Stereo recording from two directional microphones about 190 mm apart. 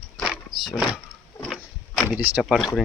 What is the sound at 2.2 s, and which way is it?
Speech, 5° right (ahead or behind).